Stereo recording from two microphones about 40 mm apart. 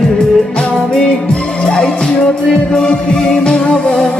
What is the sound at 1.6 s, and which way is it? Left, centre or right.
Music, centre.